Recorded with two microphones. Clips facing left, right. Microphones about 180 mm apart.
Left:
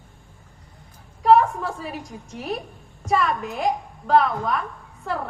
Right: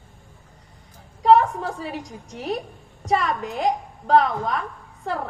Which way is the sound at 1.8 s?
35° right (ahead or behind).